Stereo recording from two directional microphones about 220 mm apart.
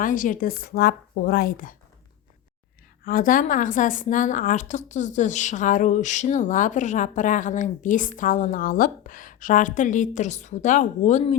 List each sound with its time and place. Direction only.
0.0 s a woman's voice: 35° left (ahead or behind)
3.0 s a woman's voice: 40° left (ahead or behind)